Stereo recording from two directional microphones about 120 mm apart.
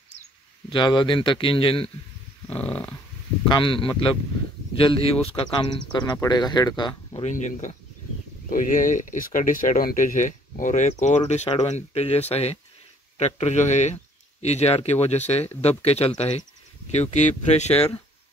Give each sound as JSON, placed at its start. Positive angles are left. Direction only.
{"t": 0.7, "sound": "speech", "side_deg": 40}
{"t": 2.6, "sound": "dog", "side_deg": 15}
{"t": 3.4, "sound": "speech", "side_deg": 45}
{"t": 7.2, "sound": "speech", "side_deg": 80}
{"t": 13.2, "sound": "speech", "side_deg": 70}
{"t": 14.4, "sound": "speech", "side_deg": 65}
{"t": 16.9, "sound": "speech", "side_deg": 75}